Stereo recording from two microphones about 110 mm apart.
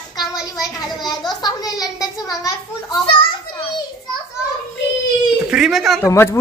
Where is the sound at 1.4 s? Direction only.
35° left (ahead or behind).